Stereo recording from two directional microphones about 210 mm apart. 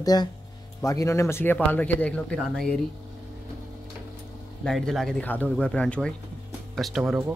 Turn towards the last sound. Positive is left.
turn(degrees=0)  # may be behind; listen again after turning